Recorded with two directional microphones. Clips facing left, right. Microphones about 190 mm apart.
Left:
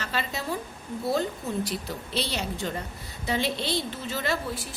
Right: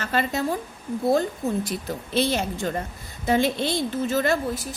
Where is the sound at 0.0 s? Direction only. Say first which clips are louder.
Right 7 dB; 50° right (ahead or behind).